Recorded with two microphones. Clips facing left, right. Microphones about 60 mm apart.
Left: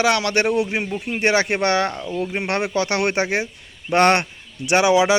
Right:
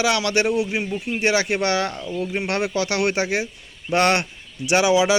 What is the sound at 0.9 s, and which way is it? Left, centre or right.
Speech, left.